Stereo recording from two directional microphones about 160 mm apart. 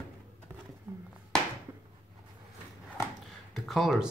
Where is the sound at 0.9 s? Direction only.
15° right (ahead or behind).